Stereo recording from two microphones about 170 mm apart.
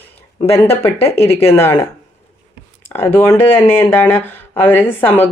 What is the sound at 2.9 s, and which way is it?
Speech, 10° left (ahead or behind).